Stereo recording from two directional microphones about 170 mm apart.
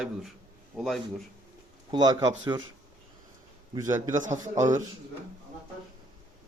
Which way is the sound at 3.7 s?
20° right (ahead or behind).